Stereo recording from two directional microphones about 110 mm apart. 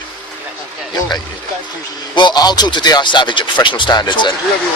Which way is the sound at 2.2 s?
40° left (ahead or behind).